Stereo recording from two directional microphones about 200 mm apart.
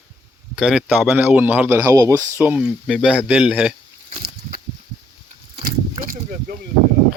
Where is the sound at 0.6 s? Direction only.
5° right (ahead or behind).